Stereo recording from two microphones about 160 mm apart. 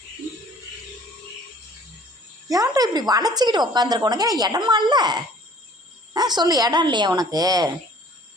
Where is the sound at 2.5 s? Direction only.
20° right (ahead or behind).